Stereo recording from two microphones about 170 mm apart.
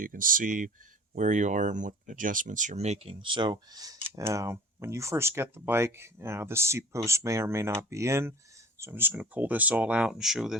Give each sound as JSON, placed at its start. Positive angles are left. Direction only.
{"t": 0.0, "sound": "speech", "side_deg": -55}